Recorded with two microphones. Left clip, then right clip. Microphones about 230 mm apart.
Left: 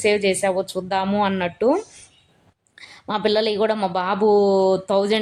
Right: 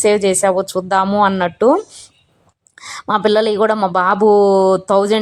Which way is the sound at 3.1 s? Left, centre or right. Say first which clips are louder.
Right 6 dB; centre.